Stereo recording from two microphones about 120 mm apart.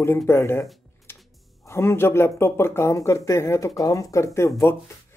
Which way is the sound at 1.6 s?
20° left (ahead or behind).